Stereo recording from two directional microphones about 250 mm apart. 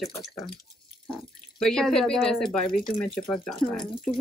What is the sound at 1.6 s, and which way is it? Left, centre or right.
Speech, centre.